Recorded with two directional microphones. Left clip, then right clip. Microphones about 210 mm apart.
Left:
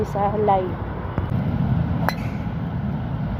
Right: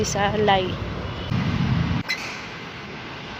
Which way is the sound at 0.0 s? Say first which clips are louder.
Even; 15° right (ahead or behind).